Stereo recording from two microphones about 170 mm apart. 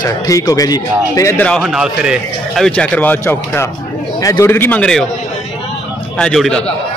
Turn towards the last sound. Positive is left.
turn(degrees=5)  # may be behind; listen again after turning